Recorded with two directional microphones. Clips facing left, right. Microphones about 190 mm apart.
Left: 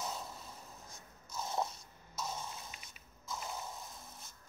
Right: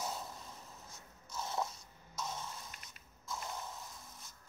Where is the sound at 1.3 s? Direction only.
15° left (ahead or behind).